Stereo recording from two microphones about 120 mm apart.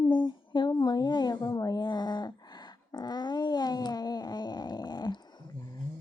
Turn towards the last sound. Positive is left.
turn(degrees=35)  # may be behind; listen again after turning